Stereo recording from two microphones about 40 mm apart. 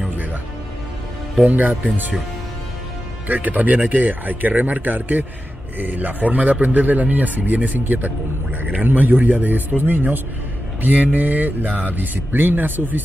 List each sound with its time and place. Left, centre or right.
1.4 s a man's voice: right
3.3 s a man's voice: right